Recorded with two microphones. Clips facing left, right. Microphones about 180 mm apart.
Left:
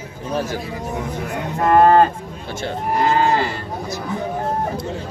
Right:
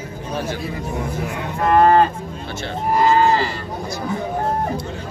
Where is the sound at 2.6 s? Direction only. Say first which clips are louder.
Right 2 dB; 55° left (ahead or behind).